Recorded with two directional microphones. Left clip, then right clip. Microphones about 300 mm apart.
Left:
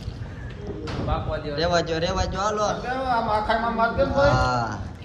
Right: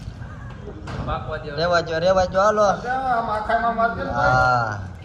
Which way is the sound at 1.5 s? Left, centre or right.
Centre.